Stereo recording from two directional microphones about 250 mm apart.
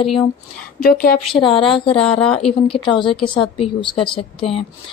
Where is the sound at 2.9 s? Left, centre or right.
Centre.